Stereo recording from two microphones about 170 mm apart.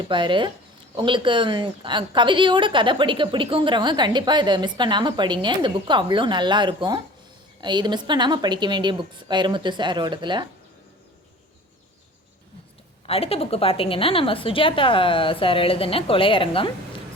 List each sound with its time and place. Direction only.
0.0 s a woman's voice: 30° right (ahead or behind)
13.1 s a woman's voice: 35° left (ahead or behind)